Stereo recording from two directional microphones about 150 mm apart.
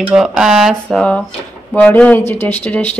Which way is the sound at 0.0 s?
5° right (ahead or behind).